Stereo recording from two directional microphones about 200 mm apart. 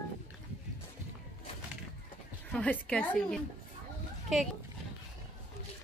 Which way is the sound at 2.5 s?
5° left (ahead or behind).